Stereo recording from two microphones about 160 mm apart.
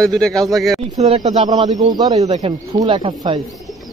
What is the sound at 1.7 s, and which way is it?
Speech, 25° right (ahead or behind).